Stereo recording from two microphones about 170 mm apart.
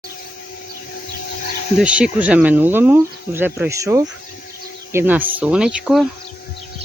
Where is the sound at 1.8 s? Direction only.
5° right (ahead or behind).